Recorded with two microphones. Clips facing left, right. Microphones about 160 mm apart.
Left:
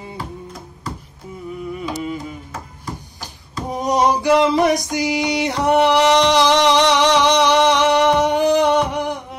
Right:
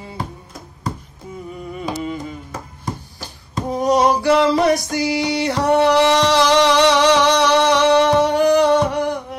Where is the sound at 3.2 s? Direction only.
15° left (ahead or behind).